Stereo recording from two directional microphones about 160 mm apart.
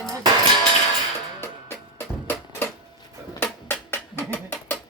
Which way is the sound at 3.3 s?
15° left (ahead or behind).